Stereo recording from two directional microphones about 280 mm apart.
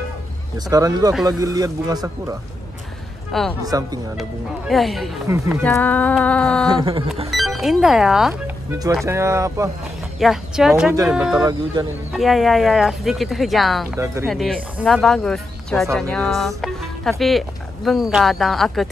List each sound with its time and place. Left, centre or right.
0.7 s speech: centre
3.3 s speech: centre
3.6 s speech: centre
4.2 s speech: centre
5.6 s speech: centre
6.8 s speech: centre
7.2 s speech: centre
11.8 s speech: centre
12.1 s speech: centre
13.9 s speech: centre
14.2 s speech: centre